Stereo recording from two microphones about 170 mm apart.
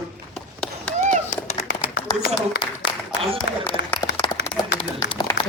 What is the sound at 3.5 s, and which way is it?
Speech, 80° left.